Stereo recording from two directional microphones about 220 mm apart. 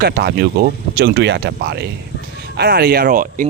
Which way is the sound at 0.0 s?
45° right (ahead or behind).